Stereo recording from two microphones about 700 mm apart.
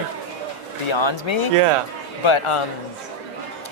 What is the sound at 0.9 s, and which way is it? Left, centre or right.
Speech, left.